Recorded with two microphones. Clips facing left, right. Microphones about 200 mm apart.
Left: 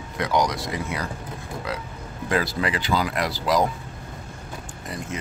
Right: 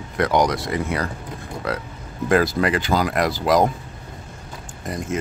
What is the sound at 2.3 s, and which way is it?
Speech, 50° right (ahead or behind).